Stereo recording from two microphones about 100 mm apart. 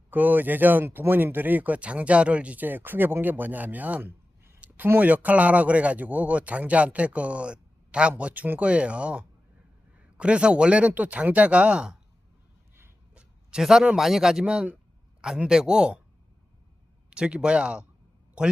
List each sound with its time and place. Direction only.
0.1 s speech: 15° right (ahead or behind)
13.1 s a man's voice: 5° right (ahead or behind)
17.1 s a man's voice: 10° right (ahead or behind)